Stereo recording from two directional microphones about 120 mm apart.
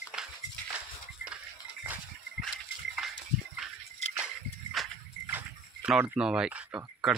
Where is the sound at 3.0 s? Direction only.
Centre (ahead or behind).